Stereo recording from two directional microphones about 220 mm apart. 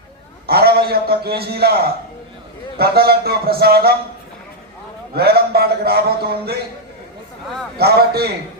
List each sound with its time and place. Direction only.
0.4 s a man's voice: 45° right (ahead or behind)
5.1 s a man's voice: 45° right (ahead or behind)
7.8 s a man's voice: 45° right (ahead or behind)